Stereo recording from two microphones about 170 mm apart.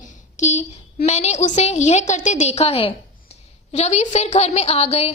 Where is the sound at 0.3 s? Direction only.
45° left (ahead or behind).